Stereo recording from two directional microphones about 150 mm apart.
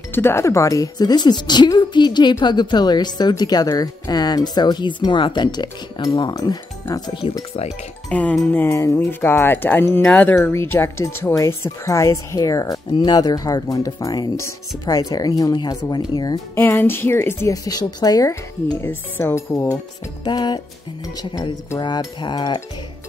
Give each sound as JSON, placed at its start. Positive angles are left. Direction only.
{"t": 0.1, "sound": "speech", "side_deg": 15}
{"t": 8.1, "sound": "speech", "side_deg": 10}
{"t": 16.5, "sound": "speech", "side_deg": 15}